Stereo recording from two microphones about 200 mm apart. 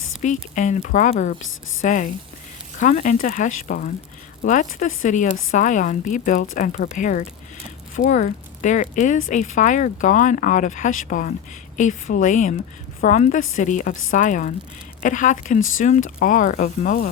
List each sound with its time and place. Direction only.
0.0 s a sound: 40° left (ahead or behind)
0.5 s speech: 40° left (ahead or behind)
1.4 s a woman's voice: 80° left
1.8 s speech: 40° left (ahead or behind)